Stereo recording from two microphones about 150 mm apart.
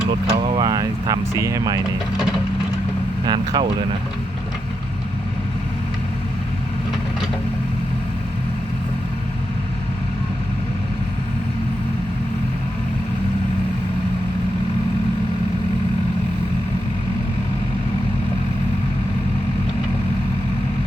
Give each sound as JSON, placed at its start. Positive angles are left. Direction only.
{"t": 0.1, "sound": "speech", "side_deg": -25}
{"t": 2.1, "sound": "wood", "side_deg": 0}
{"t": 3.2, "sound": "speech", "side_deg": -30}